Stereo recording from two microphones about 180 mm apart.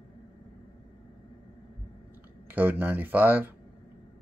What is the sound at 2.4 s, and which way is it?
Speech, 10° right (ahead or behind).